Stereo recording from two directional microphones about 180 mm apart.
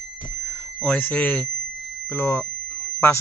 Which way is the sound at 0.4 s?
5° left (ahead or behind).